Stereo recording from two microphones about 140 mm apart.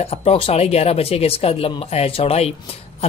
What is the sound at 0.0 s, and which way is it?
Speech, 45° left (ahead or behind).